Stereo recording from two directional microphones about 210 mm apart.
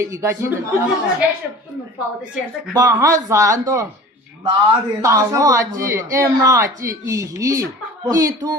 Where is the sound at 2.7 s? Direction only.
15° right (ahead or behind).